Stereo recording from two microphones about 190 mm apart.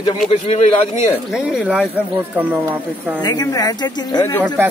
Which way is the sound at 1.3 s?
5° right (ahead or behind).